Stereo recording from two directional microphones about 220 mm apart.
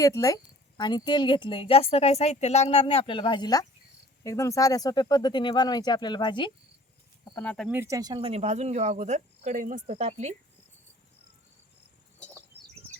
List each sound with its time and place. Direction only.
0.0 s a woman's voice: 15° left (ahead or behind)
7.3 s speech: 5° left (ahead or behind)
7.7 s speech: 10° right (ahead or behind); by 10.3 s 30° right (ahead or behind)